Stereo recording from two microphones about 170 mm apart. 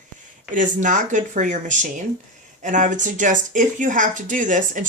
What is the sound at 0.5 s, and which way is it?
Speech, 50° right (ahead or behind).